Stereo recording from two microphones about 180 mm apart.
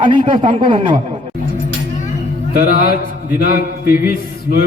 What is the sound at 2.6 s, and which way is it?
A man's voice, 55° left (ahead or behind).